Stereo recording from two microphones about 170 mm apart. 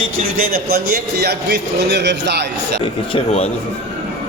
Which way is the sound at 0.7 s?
70° right (ahead or behind).